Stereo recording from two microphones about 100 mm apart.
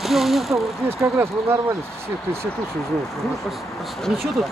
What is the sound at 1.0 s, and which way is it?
Speech, 25° right (ahead or behind).